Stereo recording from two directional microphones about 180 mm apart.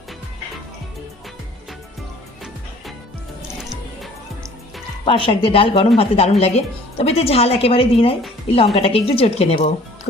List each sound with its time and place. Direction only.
3.6 s music: centre (ahead or behind)
5.0 s a woman's voice: 30° left (ahead or behind)